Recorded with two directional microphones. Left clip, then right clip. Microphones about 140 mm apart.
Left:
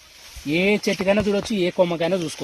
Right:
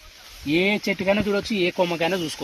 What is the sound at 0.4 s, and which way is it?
Speech, 85° left.